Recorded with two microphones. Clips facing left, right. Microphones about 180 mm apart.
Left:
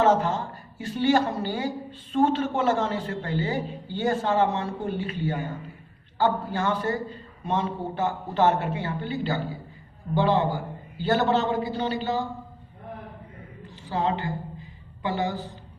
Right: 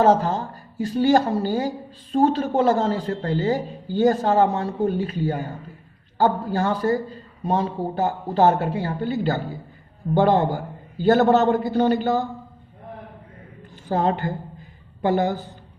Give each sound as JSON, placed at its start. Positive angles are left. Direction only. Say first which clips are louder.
{"t": 0.0, "sound": "a woman's voice", "louder": "right 3 dB", "side_deg": -35}
{"t": 13.8, "sound": "a man's voice", "louder": "right 5 dB", "side_deg": -45}